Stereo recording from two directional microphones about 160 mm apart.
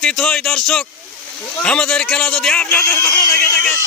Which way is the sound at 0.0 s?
5° left (ahead or behind).